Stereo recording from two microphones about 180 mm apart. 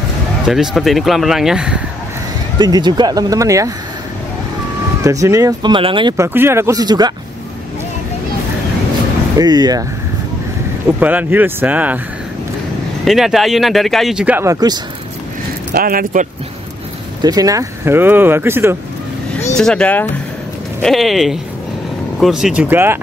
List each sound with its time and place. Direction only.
0.5 s speech: centre (ahead or behind)
2.6 s speech: 25° right (ahead or behind)
5.0 s speech: 20° right (ahead or behind)
6.1 s speech: 15° right (ahead or behind)
9.4 s speech: 20° right (ahead or behind)
11.0 s speech: 10° right (ahead or behind)
13.0 s speech: centre (ahead or behind); by 14.8 s 20° right (ahead or behind)
15.7 s speech: 55° right (ahead or behind)
17.2 s speech: 20° right (ahead or behind)
19.5 s speech: 5° left (ahead or behind); by 22.9 s 10° right (ahead or behind)